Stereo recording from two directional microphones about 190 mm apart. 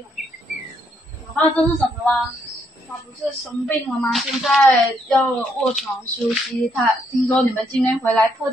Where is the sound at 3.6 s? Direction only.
Centre (ahead or behind).